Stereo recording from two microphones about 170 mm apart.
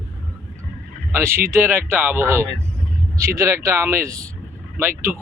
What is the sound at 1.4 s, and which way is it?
Speech, 15° right (ahead or behind).